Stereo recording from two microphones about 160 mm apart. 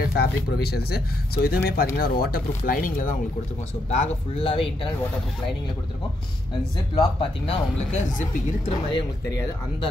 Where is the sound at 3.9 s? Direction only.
40° left (ahead or behind).